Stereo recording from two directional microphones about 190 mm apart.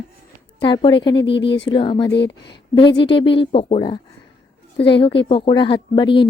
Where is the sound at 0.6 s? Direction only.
25° left (ahead or behind).